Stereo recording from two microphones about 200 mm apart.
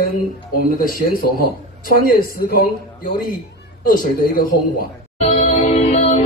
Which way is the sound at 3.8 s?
45° left (ahead or behind).